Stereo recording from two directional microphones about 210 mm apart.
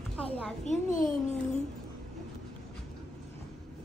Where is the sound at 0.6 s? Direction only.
35° left (ahead or behind).